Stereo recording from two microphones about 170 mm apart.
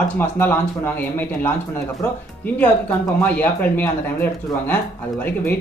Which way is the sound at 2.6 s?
10° left (ahead or behind).